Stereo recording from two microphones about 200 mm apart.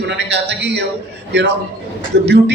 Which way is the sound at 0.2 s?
60° right (ahead or behind).